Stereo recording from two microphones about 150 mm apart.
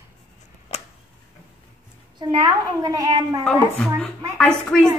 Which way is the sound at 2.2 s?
30° right (ahead or behind).